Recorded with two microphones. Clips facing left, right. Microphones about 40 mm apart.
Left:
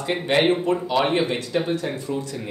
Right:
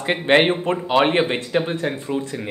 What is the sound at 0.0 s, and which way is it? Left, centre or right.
Speech, right.